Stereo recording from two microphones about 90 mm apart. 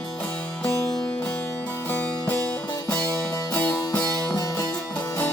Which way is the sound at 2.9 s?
20° left (ahead or behind).